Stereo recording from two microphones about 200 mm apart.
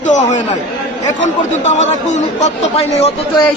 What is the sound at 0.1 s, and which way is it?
A man's voice, 40° left (ahead or behind).